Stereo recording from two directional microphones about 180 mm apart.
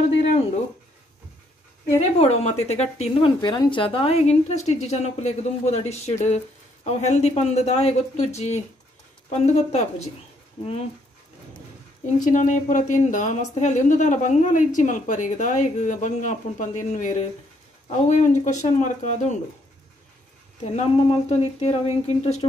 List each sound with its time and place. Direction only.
2.0 s a woman's voice: 35° left (ahead or behind)
12.3 s a woman's voice: 45° left (ahead or behind)
20.6 s a woman's voice: 35° left (ahead or behind)